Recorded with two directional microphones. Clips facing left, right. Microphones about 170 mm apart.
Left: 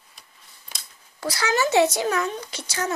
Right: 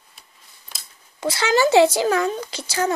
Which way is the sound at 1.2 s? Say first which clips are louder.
Right 5 dB; 25° right (ahead or behind).